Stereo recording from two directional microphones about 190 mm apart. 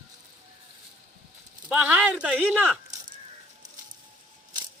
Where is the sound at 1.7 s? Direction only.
5° right (ahead or behind).